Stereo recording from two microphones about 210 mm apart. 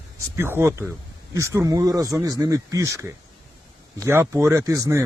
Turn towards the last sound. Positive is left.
turn(degrees=-15)  # may be behind; listen again after turning